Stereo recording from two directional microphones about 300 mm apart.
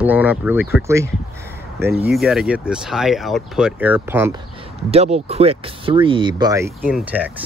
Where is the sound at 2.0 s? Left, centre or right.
Centre.